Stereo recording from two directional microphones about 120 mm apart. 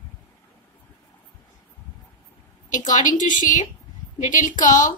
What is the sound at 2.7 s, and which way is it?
A woman's voice, 90° left.